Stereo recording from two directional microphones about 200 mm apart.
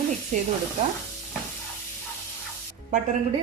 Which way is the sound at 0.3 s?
35° right (ahead or behind).